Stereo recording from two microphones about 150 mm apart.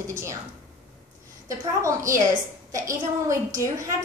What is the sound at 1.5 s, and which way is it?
A woman's voice, 20° right (ahead or behind).